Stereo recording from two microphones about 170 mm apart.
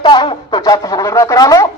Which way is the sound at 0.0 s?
25° left (ahead or behind).